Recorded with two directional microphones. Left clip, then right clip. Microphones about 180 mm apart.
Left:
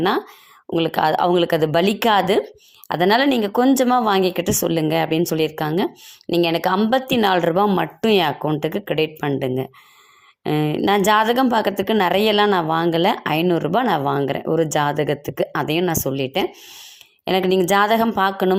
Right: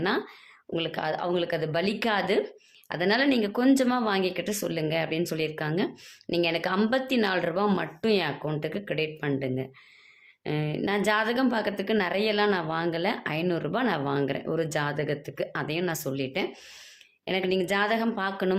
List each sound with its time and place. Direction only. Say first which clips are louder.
0.7 s speech: left 11 dB; 35° left (ahead or behind)